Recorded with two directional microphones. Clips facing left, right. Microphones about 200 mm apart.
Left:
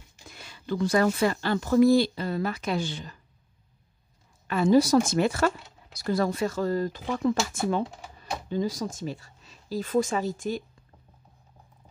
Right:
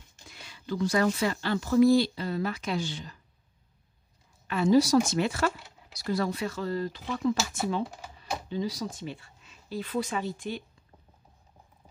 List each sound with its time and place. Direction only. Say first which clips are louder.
0.3 s speech: left 3 dB; 50° left (ahead or behind)
4.5 s speech: left 2 dB; 50° left (ahead or behind)
7.8 s speech: left 1 dB; centre (ahead or behind)
8.5 s speech: left 5 dB; 50° left (ahead or behind)